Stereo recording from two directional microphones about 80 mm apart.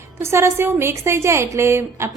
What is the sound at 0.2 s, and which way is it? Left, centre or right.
A woman's voice, right.